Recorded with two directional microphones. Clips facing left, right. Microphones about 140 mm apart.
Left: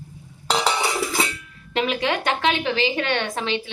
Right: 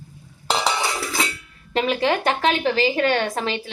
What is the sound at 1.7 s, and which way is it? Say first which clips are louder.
A woman's voice: right 2 dB; 35° right (ahead or behind).